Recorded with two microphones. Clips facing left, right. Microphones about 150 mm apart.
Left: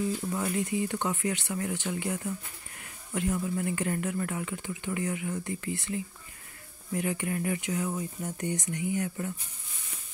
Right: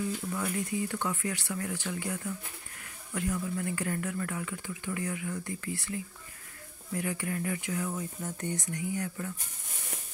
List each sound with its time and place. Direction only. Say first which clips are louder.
0.3 s speech: left 3 dB; 25° left (ahead or behind)